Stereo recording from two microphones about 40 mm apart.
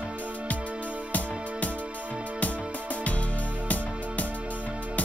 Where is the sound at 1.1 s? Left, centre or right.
Left.